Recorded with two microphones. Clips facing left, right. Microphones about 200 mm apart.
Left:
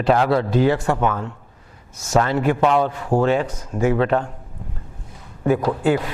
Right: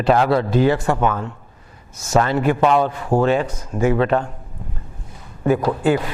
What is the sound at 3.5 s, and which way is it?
Speech, 25° right (ahead or behind).